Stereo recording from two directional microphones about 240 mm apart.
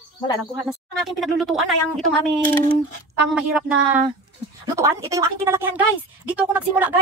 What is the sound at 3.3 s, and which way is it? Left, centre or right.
Speech, centre.